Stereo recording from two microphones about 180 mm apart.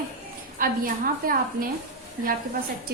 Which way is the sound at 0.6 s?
50° right (ahead or behind).